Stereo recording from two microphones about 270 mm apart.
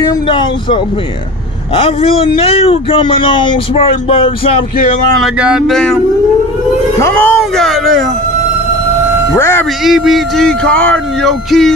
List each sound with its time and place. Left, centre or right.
0.0 s speech: centre
1.8 s speech: left
5.2 s speech: centre
7.0 s speech: centre
9.3 s speech: centre